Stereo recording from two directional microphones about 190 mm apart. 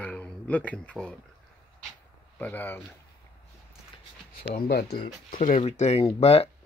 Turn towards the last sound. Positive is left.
turn(degrees=30)  # may be behind; listen again after turning